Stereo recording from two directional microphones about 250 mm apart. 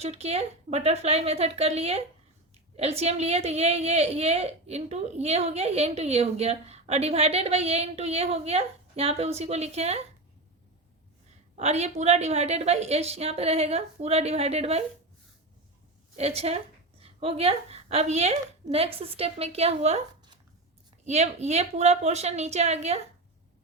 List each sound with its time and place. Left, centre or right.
0.0 s a woman's voice: right
11.5 s a woman's voice: right
16.1 s a woman's voice: right